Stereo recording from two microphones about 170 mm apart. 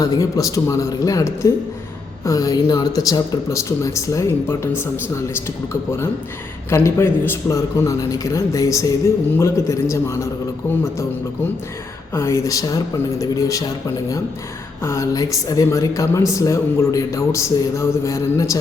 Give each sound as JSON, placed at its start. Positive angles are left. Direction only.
{"t": 0.0, "sound": "a woman's voice", "side_deg": 20}
{"t": 6.7, "sound": "a woman's voice", "side_deg": 15}
{"t": 12.1, "sound": "a woman's voice", "side_deg": 15}
{"t": 14.8, "sound": "a woman's voice", "side_deg": 15}